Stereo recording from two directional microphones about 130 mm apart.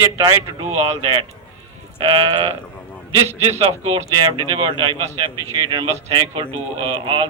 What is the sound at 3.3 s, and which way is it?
Speech, 55° right (ahead or behind).